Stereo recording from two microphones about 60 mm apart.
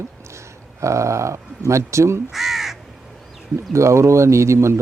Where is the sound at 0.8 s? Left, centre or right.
Right.